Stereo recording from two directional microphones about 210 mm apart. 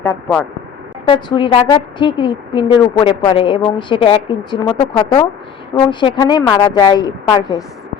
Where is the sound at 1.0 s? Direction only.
20° left (ahead or behind).